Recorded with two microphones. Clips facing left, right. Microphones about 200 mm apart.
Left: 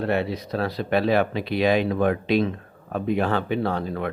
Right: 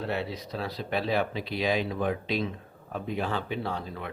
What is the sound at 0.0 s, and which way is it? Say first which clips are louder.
Speech: left 7 dB; 65° left (ahead or behind).